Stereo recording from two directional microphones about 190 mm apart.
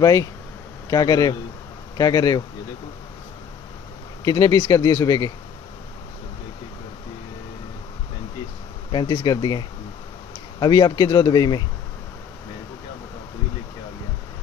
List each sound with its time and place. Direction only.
0.0 s speech: 20° left (ahead or behind)
4.2 s speech: 20° left (ahead or behind)
8.9 s speech: 20° left (ahead or behind)